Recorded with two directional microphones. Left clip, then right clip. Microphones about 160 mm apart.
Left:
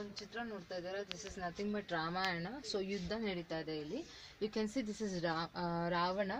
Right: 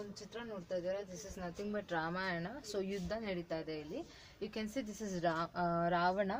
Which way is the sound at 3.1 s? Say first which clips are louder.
Even; 50° left (ahead or behind).